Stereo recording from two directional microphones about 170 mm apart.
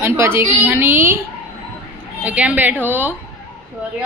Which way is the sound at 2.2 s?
10° right (ahead or behind).